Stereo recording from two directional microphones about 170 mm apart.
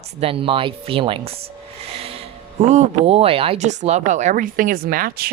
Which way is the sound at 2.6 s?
40° right (ahead or behind).